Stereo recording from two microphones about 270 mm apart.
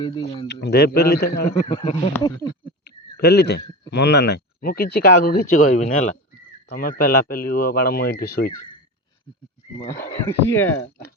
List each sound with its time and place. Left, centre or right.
0.0 s speech: centre
0.4 s speech: left
1.6 s speech: left
3.2 s speech: left
10.2 s speech: centre